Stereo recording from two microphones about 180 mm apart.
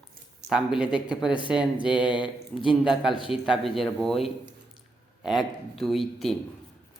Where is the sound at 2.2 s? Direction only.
30° left (ahead or behind).